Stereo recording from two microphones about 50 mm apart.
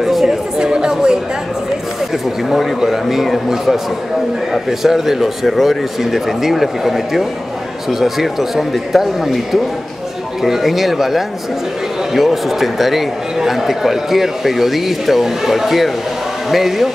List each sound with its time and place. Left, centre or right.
0.0 s chatter: centre
0.6 s chatter: centre
2.5 s a man's voice: centre